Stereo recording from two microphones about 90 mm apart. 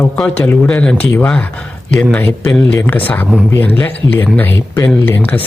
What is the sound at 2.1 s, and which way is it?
Speech, 15° left (ahead or behind).